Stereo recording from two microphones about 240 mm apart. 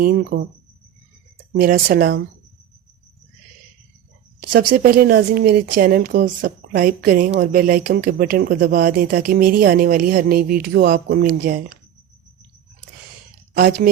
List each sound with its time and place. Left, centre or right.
0.0 s a woman's voice: right
1.5 s a woman's voice: right
4.7 s a woman's voice: right
13.5 s speech: right